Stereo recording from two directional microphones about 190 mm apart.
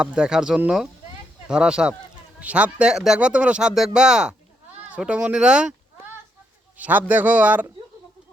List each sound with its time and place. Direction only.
0.0 s speech: 5° right (ahead or behind)
6.7 s a man's voice: 10° right (ahead or behind)